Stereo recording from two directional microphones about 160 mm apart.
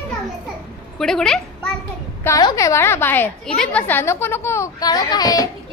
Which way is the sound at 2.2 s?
20° left (ahead or behind).